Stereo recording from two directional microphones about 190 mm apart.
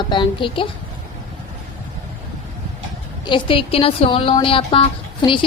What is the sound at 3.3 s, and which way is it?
A woman's voice, 25° left (ahead or behind).